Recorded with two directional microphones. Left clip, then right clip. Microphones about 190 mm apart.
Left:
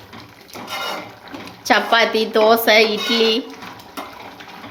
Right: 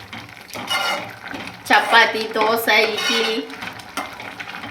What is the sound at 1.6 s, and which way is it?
Speech, 50° left (ahead or behind).